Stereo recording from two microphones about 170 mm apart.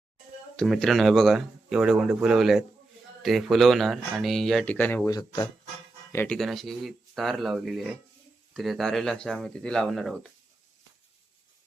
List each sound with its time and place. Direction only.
0.5 s speech: centre (ahead or behind)
5.1 s speech: 20° left (ahead or behind)
6.3 s speech: centre (ahead or behind)